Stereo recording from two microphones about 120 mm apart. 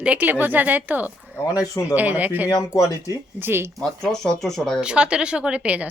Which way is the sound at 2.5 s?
30° left (ahead or behind).